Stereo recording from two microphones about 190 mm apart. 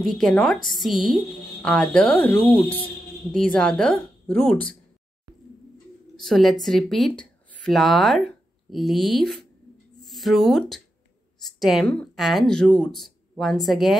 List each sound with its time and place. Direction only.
0.0 s speech: centre (ahead or behind)
6.1 s a woman's voice: centre (ahead or behind)